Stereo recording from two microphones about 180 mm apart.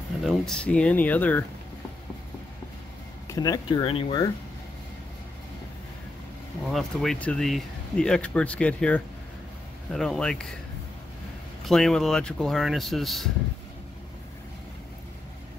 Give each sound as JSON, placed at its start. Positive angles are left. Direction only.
{"t": 0.2, "sound": "speech", "side_deg": 0}
{"t": 3.3, "sound": "speech", "side_deg": 20}
{"t": 6.7, "sound": "speech", "side_deg": 0}
{"t": 11.6, "sound": "speech", "side_deg": 0}